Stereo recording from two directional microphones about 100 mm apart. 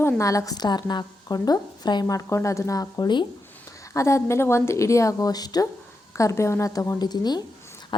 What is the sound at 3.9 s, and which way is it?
A woman's voice, 30° left (ahead or behind).